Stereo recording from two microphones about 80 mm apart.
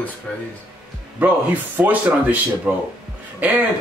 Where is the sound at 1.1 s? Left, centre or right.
Right.